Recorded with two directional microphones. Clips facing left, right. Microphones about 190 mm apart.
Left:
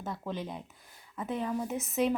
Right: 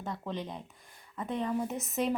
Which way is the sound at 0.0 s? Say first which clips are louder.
Even; 5° left (ahead or behind).